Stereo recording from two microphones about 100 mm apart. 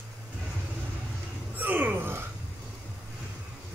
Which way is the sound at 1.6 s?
15° right (ahead or behind).